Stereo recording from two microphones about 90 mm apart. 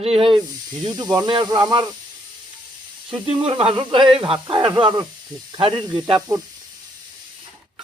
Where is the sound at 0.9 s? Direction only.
50° right (ahead or behind).